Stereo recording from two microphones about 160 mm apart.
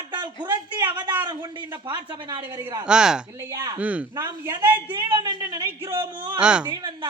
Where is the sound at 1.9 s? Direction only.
25° right (ahead or behind).